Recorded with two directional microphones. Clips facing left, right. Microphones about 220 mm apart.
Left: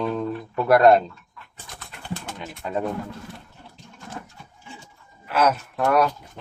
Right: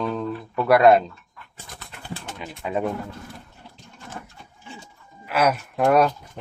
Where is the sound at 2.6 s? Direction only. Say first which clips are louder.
Right 1 dB; 10° right (ahead or behind).